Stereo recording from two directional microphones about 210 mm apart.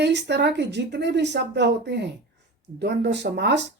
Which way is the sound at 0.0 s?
55° right (ahead or behind).